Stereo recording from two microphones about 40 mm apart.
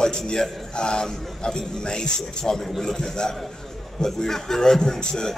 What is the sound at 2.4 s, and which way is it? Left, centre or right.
A man's voice, centre.